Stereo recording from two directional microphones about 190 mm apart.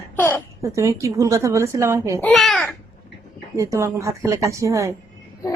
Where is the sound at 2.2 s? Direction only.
Centre (ahead or behind).